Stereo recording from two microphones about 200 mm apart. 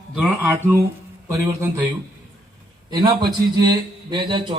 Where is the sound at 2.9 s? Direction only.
20° right (ahead or behind).